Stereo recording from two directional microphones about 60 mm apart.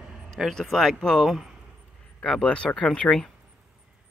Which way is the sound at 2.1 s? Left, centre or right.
Centre.